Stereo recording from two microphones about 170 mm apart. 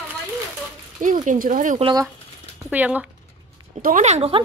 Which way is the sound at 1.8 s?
25° right (ahead or behind).